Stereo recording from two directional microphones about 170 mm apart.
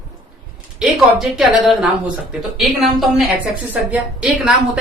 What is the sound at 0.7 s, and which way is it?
A woman's voice, centre (ahead or behind).